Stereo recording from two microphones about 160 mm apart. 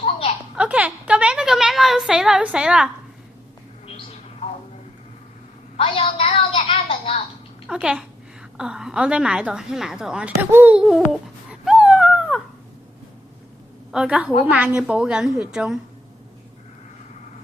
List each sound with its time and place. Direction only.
0.5 s a sound: 5° right (ahead or behind)
5.7 s a woman's voice: 35° left (ahead or behind)
7.7 s a woman's voice: 5° right (ahead or behind)
11.6 s dog: 5° right (ahead or behind)
13.9 s a woman's voice: 5° right (ahead or behind)